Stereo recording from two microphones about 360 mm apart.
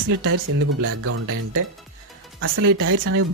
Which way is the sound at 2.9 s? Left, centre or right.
Right.